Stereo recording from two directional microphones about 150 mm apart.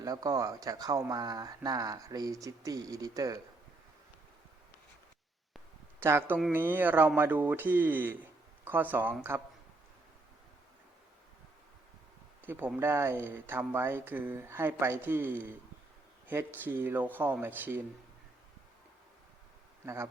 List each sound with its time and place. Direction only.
0.0 s speech: 25° right (ahead or behind)
6.0 s speech: 15° right (ahead or behind)
12.5 s speech: 10° right (ahead or behind)
19.8 s speech: 20° right (ahead or behind)